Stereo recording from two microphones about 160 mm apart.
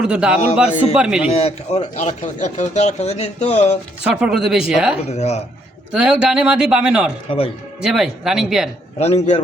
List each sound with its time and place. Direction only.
0.0 s a man's voice: 5° right (ahead or behind)
1.4 s speech: 40° left (ahead or behind)
4.0 s a man's voice: 5° right (ahead or behind)
5.0 s speech: 40° left (ahead or behind)
5.9 s a man's voice: 5° right (ahead or behind)
7.3 s speech: 35° left (ahead or behind)
7.8 s a man's voice: 5° right (ahead or behind)
9.0 s speech: 45° left (ahead or behind)